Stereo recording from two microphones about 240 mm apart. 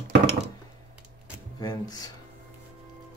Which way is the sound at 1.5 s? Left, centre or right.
Centre.